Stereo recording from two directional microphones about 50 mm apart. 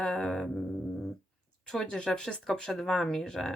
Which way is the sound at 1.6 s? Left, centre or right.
Centre.